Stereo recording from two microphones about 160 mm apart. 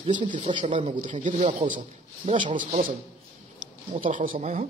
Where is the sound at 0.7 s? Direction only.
50° right (ahead or behind).